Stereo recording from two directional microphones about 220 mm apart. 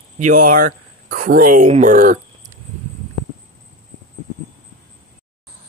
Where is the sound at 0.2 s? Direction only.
40° right (ahead or behind).